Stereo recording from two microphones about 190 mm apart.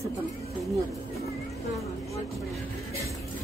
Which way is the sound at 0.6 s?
Centre (ahead or behind).